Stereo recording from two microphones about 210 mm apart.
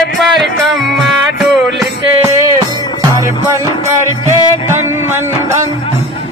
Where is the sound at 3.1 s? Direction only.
15° left (ahead or behind).